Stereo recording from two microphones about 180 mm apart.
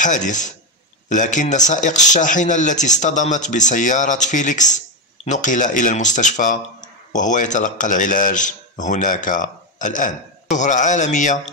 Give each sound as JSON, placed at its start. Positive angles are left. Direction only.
{"t": 0.0, "sound": "speech", "side_deg": 45}